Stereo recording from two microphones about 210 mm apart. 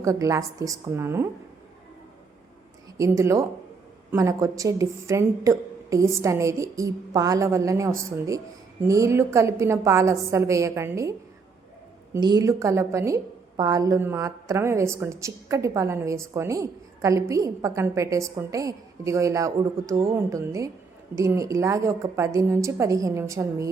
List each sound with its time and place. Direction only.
0.0 s a woman's voice: 15° right (ahead or behind)
3.0 s a woman's voice: 15° right (ahead or behind)
12.1 s a woman's voice: 20° right (ahead or behind)